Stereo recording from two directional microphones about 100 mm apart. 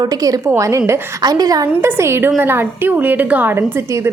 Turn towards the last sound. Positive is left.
turn(degrees=-20)  # may be behind; listen again after turning